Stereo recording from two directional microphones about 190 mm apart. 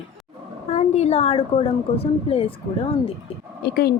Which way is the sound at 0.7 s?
35° left (ahead or behind).